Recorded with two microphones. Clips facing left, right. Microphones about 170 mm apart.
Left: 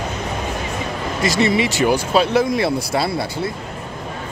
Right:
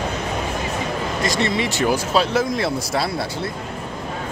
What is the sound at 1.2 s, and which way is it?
Speech, 5° left (ahead or behind).